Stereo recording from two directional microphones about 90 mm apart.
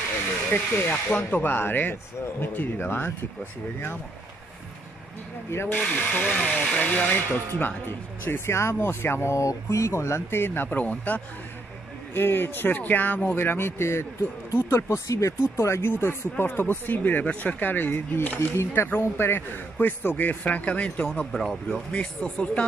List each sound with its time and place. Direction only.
0.5 s speech: 25° left (ahead or behind)
5.5 s speech: 25° left (ahead or behind)